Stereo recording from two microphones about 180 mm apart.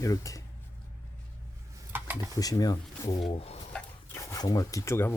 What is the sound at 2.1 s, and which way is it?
Speech, 20° left (ahead or behind).